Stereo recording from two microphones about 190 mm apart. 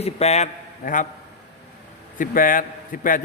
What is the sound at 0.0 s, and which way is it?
Speech, 35° left (ahead or behind).